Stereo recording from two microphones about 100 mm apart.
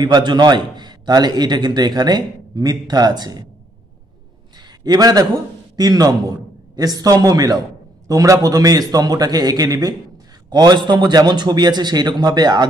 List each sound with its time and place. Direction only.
0.0 s a man's voice: 45° right (ahead or behind)
4.6 s a sound: 40° right (ahead or behind)
5.8 s a man's voice: 40° right (ahead or behind)